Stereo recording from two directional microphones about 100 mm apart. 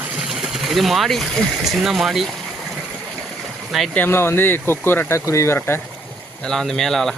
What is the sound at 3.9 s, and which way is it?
Speech, 20° left (ahead or behind).